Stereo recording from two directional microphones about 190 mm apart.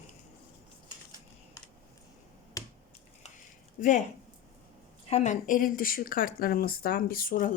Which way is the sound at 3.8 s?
45° left (ahead or behind).